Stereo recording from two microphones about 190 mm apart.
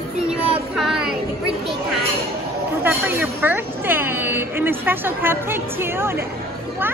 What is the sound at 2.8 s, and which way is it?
Speech, 10° right (ahead or behind).